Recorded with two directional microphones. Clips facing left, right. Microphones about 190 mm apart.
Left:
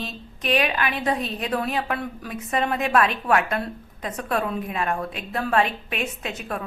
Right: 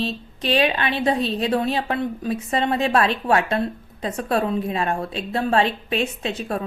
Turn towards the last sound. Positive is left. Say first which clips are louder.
# right 5 dB
turn(degrees=-30)  # may be behind; listen again after turning